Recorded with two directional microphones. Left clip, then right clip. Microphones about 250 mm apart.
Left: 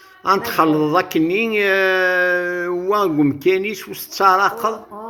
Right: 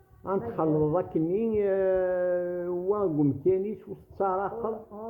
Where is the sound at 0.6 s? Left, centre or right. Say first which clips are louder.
Left 11 dB; left.